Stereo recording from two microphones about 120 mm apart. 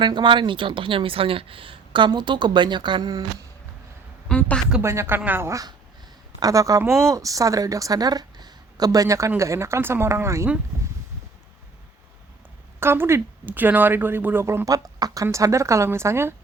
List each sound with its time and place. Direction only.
0.0 s speech: 40° right (ahead or behind)
4.3 s a woman's voice: 10° left (ahead or behind)
4.8 s a woman's voice: 25° right (ahead or behind)
12.8 s a woman's voice: 20° right (ahead or behind)